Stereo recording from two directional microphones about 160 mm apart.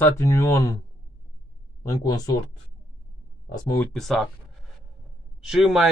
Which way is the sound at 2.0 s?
25° left (ahead or behind).